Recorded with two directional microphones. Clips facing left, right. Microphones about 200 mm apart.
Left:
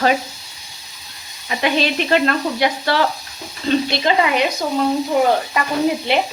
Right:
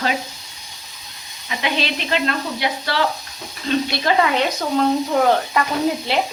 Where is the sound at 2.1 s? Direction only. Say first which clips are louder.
Left 4 dB; 50° left (ahead or behind).